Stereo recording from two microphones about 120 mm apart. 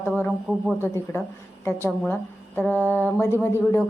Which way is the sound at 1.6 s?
20° left (ahead or behind).